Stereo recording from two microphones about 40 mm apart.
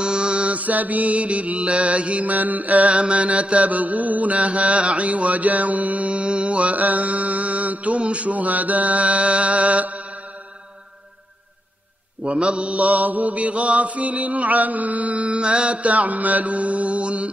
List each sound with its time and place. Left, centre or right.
0.0 s mantra: right
0.6 s mantra: right
12.2 s mantra: right